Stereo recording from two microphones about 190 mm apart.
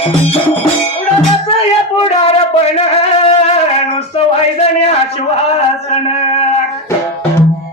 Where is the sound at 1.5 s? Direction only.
35° left (ahead or behind).